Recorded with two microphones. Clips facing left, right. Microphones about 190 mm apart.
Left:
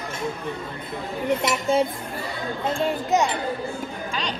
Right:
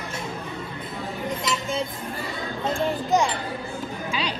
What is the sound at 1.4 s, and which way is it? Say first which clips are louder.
Speech: left 6 dB; 60° left (ahead or behind).